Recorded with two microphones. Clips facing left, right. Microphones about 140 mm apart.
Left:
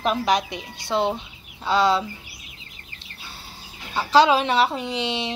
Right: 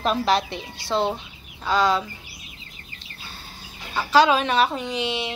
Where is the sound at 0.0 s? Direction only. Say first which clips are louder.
Even; 10° left (ahead or behind); by 2.0 s 25° left (ahead or behind).